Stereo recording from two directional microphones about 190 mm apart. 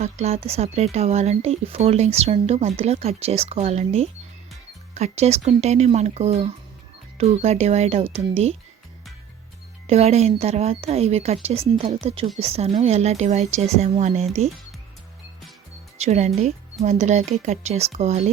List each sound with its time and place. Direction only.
0.0 s speech: 35° right (ahead or behind)
9.8 s speech: 35° right (ahead or behind)
16.0 s speech: 35° right (ahead or behind)